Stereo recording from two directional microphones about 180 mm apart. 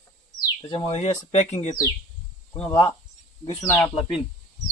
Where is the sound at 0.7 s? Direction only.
30° left (ahead or behind).